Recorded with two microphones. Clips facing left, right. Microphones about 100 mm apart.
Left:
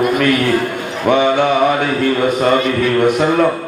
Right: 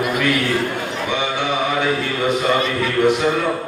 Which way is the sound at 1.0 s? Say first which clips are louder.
Left 11 dB; 50° left (ahead or behind).